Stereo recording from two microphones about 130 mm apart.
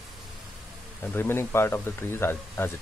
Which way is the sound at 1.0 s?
15° left (ahead or behind).